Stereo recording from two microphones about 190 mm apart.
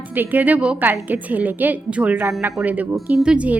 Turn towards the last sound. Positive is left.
turn(degrees=-5)  # may be behind; listen again after turning